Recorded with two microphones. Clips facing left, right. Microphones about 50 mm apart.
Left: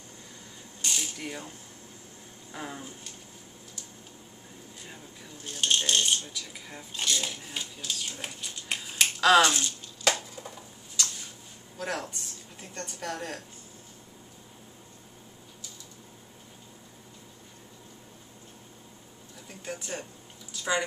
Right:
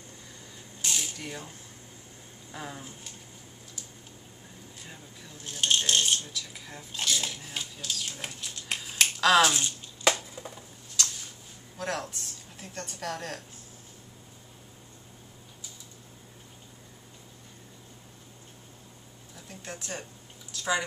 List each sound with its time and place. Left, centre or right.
0.8 s mechanisms: centre
2.5 s speech: centre
5.4 s rattle: centre
9.6 s finger snapping: right
11.8 s a woman's voice: centre
19.6 s a sound: centre